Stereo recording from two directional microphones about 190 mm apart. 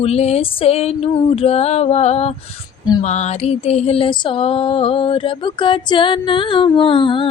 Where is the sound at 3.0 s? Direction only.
35° left (ahead or behind).